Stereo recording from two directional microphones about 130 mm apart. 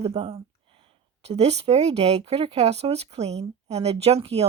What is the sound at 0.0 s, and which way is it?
Speech, 45° right (ahead or behind).